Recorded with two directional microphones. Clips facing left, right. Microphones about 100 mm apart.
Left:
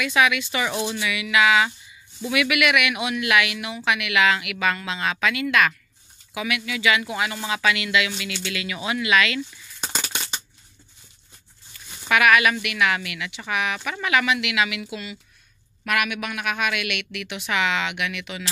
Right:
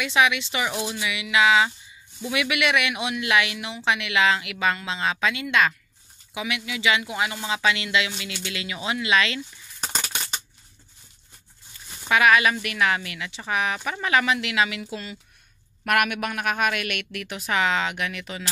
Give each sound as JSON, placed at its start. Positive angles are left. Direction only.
{"t": 0.0, "sound": "speech", "side_deg": -25}
{"t": 9.4, "sound": "coin", "side_deg": -5}
{"t": 12.1, "sound": "a woman's voice", "side_deg": -25}
{"t": 15.8, "sound": "a woman's voice", "side_deg": -50}